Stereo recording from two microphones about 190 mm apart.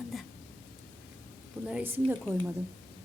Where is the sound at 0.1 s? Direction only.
Centre (ahead or behind).